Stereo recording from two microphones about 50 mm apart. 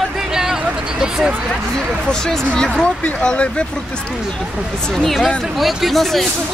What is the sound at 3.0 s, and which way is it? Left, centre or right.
Speech, left.